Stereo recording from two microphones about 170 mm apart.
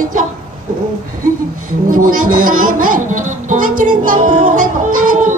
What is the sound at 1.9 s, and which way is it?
Speech, 55° right (ahead or behind).